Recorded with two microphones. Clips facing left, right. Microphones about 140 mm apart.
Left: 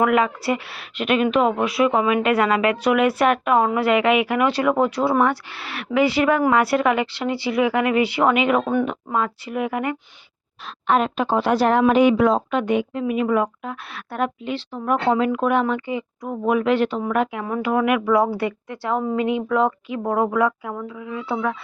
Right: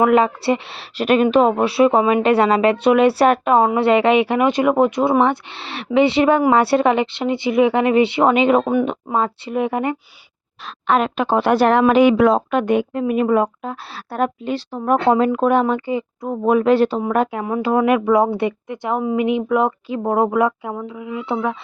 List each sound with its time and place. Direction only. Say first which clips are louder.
0.0 s speech: right 4 dB; 30° right (ahead or behind)
10.8 s speech: right 2 dB; 85° right; by 17.4 s 40° right (ahead or behind)
17.4 s speech: right 3 dB; 25° right (ahead or behind)